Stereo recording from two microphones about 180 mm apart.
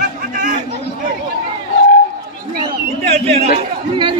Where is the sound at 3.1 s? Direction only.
35° right (ahead or behind).